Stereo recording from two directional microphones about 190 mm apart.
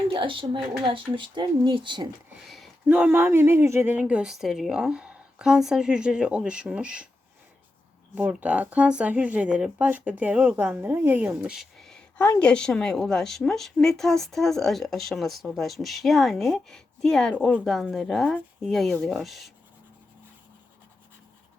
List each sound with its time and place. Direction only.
0.1 s speech: 25° right (ahead or behind)
2.4 s speech: centre (ahead or behind)
8.1 s speech: 10° right (ahead or behind)